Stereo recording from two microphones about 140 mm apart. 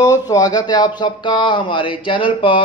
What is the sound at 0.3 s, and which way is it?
Speech, 30° left (ahead or behind).